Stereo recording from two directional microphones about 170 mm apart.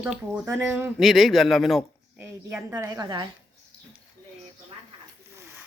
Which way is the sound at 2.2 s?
15° right (ahead or behind).